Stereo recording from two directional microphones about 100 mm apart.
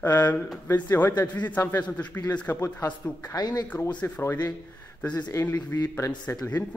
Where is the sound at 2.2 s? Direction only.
15° left (ahead or behind).